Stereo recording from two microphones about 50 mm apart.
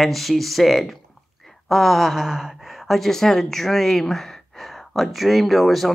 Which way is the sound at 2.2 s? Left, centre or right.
Centre.